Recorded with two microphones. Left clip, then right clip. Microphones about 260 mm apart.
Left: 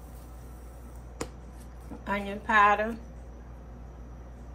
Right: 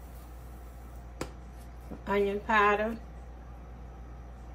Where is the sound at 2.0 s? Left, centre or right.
Left.